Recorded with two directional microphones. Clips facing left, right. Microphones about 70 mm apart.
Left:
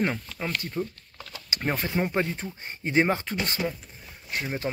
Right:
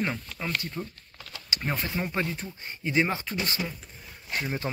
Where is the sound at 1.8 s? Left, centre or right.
Left.